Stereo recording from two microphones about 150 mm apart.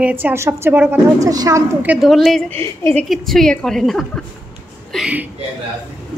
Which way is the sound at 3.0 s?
Centre (ahead or behind).